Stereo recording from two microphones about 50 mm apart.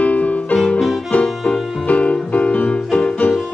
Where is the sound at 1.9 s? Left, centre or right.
Left.